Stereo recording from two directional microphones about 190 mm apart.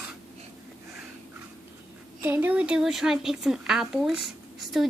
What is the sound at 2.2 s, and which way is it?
A woman's voice, 10° right (ahead or behind).